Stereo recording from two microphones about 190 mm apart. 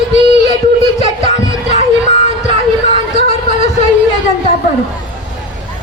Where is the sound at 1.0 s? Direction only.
35° left (ahead or behind).